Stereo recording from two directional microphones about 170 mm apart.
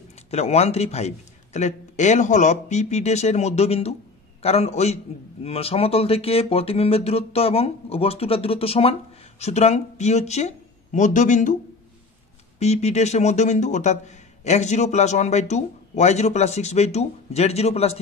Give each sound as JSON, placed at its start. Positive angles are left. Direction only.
{"t": 0.3, "sound": "a man's voice", "side_deg": 40}
{"t": 12.5, "sound": "a man's voice", "side_deg": 40}